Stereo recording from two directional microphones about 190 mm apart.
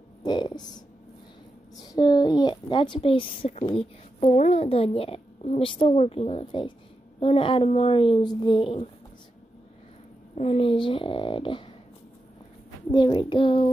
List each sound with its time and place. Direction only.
0.2 s a child's voice: 20° left (ahead or behind)
10.3 s a woman's voice: 30° left (ahead or behind)
12.9 s a woman's voice: 25° left (ahead or behind)